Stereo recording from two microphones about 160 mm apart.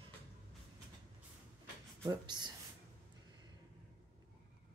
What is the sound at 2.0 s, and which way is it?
Speech, 25° right (ahead or behind).